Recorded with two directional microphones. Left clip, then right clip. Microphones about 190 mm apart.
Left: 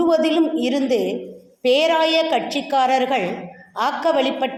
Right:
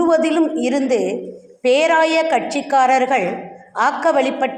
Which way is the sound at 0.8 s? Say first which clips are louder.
Right 2 dB; 25° right (ahead or behind).